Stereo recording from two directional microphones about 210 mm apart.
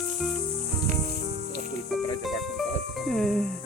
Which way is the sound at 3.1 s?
Centre (ahead or behind).